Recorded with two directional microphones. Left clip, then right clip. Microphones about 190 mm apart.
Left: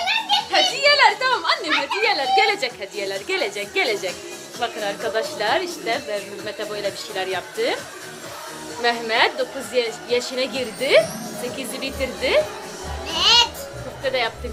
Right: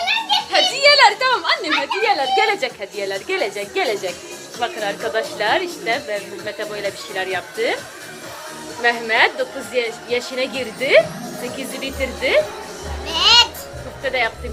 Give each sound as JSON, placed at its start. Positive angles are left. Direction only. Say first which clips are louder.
{"t": 0.5, "sound": "children playing", "louder": "right 4 dB", "side_deg": -60}
{"t": 1.7, "sound": "a woman's voice", "louder": "right 2 dB", "side_deg": -5}
{"t": 8.8, "sound": "a woman's voice", "louder": "right 3 dB", "side_deg": 10}
{"t": 13.1, "sound": "music", "louder": "right 3 dB", "side_deg": -25}
{"t": 14.0, "sound": "speech", "louder": "right 2 dB", "side_deg": 5}